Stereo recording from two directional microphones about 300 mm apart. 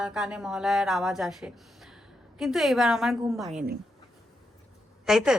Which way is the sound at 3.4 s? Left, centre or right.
Right.